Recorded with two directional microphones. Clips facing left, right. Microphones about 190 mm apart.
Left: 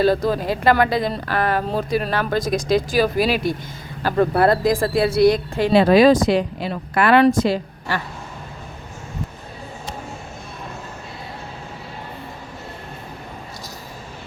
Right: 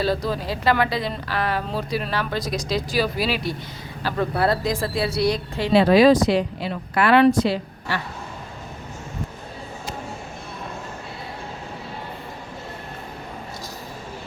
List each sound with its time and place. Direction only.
0.0 s speech: 50° left (ahead or behind)